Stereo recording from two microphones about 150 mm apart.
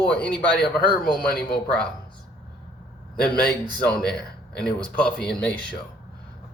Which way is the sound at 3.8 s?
5° left (ahead or behind).